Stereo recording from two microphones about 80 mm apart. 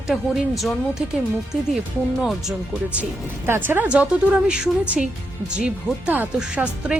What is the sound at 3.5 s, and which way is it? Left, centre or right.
Speech, right.